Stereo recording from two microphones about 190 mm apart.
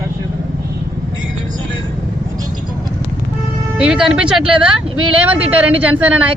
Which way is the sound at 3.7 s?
5° right (ahead or behind).